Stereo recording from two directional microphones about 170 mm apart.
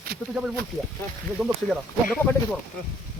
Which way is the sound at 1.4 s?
Centre (ahead or behind).